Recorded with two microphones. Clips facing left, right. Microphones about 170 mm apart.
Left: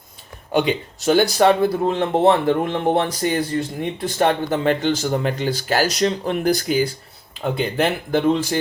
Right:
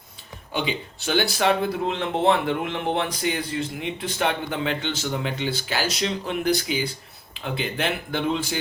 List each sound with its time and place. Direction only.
0.7 s speech: 45° left (ahead or behind)